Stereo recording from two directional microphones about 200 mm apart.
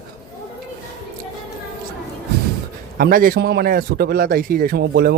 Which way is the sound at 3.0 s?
45° right (ahead or behind).